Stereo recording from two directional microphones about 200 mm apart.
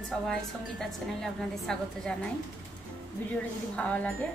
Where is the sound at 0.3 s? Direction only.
5° left (ahead or behind).